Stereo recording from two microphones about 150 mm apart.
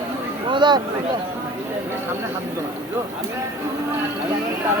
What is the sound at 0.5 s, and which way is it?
Speech, 30° right (ahead or behind).